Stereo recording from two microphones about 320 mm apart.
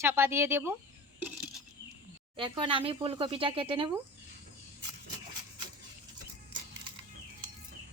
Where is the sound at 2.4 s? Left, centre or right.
Centre.